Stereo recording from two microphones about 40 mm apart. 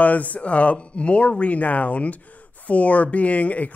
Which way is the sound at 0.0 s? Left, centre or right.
Left.